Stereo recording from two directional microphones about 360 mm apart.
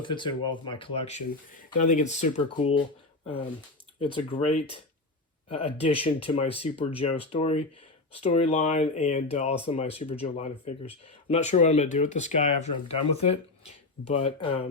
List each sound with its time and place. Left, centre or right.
0.0 s speech: centre
4.0 s speech: centre